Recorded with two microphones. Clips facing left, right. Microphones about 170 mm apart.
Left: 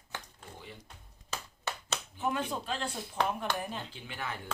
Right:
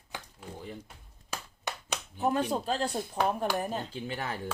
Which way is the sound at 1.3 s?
15° right (ahead or behind).